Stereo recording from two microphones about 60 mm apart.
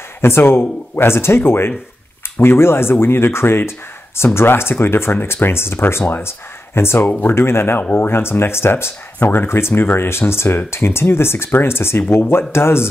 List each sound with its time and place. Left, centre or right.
0.2 s speech: left